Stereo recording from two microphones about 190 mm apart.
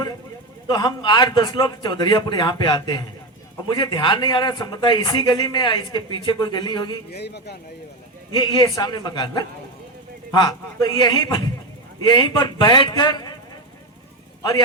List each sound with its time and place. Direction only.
0.7 s a man's voice: 25° left (ahead or behind)
7.1 s a man's voice: 60° left (ahead or behind)
8.3 s a man's voice: 25° left (ahead or behind)